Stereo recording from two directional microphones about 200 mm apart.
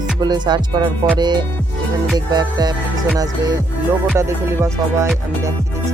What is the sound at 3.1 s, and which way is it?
Music, 20° right (ahead or behind).